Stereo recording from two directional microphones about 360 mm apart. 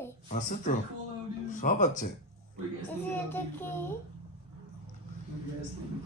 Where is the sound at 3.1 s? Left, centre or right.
Centre.